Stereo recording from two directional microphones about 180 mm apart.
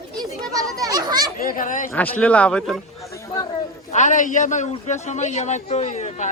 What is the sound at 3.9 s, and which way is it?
A man's voice, 45° left (ahead or behind).